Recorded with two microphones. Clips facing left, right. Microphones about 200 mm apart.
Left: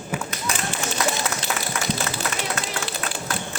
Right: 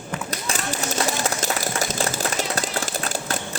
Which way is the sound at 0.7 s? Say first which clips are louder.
Right 2 dB; 40° right (ahead or behind).